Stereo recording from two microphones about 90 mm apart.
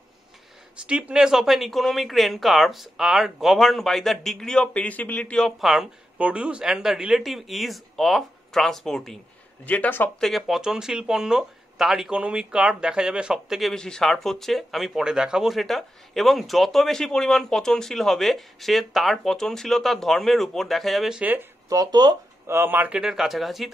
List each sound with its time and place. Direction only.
0.8 s speech: 10° right (ahead or behind); by 5.5 s 10° left (ahead or behind)
5.6 s speech: centre (ahead or behind)
6.1 s speech: 15° right (ahead or behind); by 9.2 s 5° left (ahead or behind)
9.7 s speech: 20° left (ahead or behind)
10.2 s speech: centre (ahead or behind)
21.1 s speech: 20° right (ahead or behind)
21.6 s speech: 45° right (ahead or behind)
22.5 s speech: 25° right (ahead or behind); by 23.7 s centre (ahead or behind)